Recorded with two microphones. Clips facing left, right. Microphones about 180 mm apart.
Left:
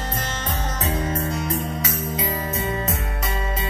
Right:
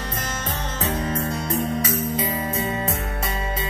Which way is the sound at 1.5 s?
30° right (ahead or behind).